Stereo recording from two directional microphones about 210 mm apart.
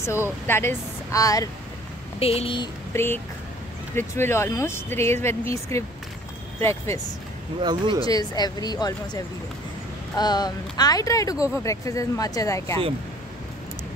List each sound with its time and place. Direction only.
0.5 s speech: 10° left (ahead or behind)
2.1 s speech: 30° left (ahead or behind)
2.9 s speech: 10° left (ahead or behind)
7.6 s speech: 20° right (ahead or behind)
8.0 s speech: 20° left (ahead or behind)